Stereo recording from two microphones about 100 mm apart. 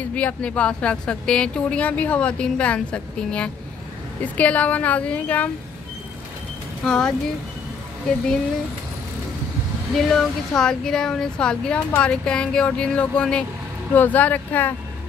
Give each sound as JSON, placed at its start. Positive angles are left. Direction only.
{"t": 0.1, "sound": "speech", "side_deg": 10}
{"t": 6.8, "sound": "speech", "side_deg": 10}
{"t": 9.9, "sound": "speech", "side_deg": 0}